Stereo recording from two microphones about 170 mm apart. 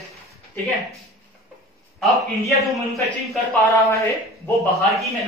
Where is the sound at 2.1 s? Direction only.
20° right (ahead or behind).